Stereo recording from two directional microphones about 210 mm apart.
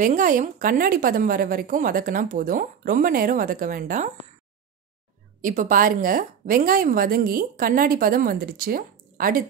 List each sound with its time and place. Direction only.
0.0 s a woman's voice: 40° right (ahead or behind)
5.4 s a woman's voice: 40° right (ahead or behind)